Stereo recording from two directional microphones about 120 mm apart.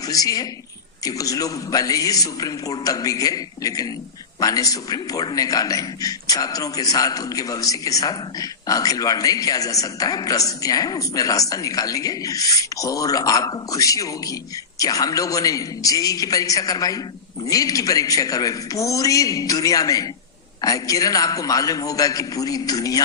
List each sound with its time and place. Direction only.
0.1 s a man's voice: 30° left (ahead or behind)